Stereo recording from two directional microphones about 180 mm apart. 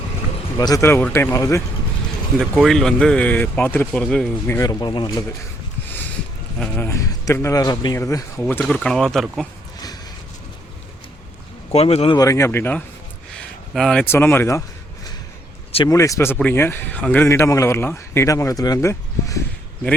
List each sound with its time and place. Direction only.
0.6 s speech: 15° left (ahead or behind)
2.4 s speech: centre (ahead or behind)
4.4 s speech: 15° left (ahead or behind)
6.6 s speech: 10° left (ahead or behind)
8.4 s speech: 10° left (ahead or behind)
11.7 s speech: 35° left (ahead or behind)
12.1 s speech: 20° left (ahead or behind)
15.9 s speech: 15° left (ahead or behind)